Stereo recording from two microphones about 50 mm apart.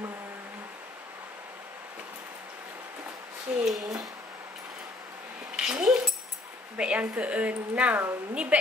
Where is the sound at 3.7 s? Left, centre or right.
Centre.